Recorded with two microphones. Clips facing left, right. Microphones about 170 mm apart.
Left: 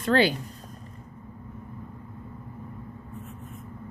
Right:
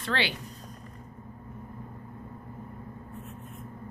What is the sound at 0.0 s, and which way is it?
Speech, 40° left (ahead or behind).